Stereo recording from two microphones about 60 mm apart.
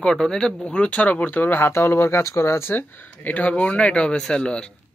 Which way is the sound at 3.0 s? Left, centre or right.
Left.